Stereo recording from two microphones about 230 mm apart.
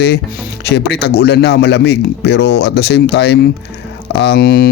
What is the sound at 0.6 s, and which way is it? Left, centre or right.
Speech, left.